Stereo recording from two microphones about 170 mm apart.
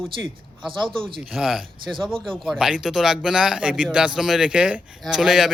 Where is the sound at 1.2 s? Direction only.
5° right (ahead or behind).